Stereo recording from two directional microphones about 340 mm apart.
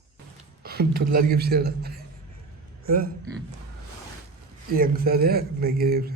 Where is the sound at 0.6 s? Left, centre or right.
Right.